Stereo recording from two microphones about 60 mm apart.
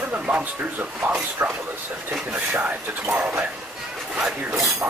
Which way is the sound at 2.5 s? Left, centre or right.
Right.